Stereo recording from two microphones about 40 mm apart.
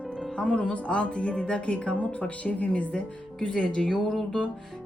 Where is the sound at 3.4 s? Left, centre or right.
Left.